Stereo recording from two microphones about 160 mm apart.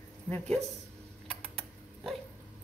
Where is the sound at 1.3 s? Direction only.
5° left (ahead or behind).